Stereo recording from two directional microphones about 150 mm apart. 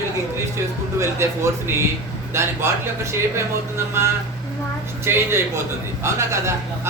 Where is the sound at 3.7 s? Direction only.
15° right (ahead or behind).